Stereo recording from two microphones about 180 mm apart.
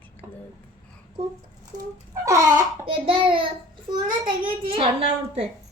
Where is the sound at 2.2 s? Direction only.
15° right (ahead or behind).